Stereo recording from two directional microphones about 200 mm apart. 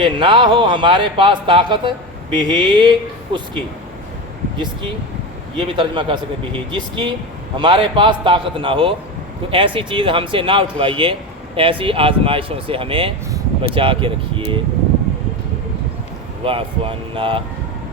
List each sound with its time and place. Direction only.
0.0 s speech: 25° right (ahead or behind)
5.5 s speech: 25° right (ahead or behind)
16.4 s speech: 25° right (ahead or behind)